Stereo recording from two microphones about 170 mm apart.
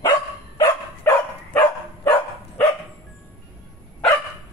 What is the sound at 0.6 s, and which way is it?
Dog, 15° left (ahead or behind).